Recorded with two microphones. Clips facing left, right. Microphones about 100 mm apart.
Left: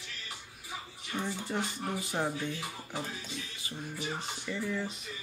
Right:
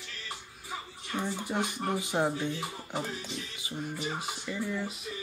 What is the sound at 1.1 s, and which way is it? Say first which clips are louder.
Speech: right 2 dB; 15° right (ahead or behind).